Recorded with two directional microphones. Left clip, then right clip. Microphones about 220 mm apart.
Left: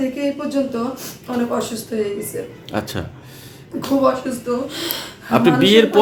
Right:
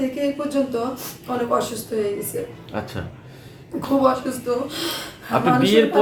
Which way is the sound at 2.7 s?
55° left (ahead or behind).